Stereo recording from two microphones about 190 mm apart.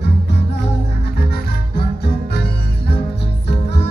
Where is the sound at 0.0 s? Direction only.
60° left (ahead or behind).